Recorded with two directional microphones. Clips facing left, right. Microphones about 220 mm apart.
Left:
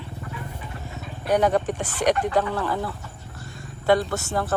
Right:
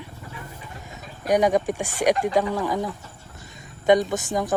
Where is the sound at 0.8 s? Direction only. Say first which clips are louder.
Right 1 dB; 15° right (ahead or behind).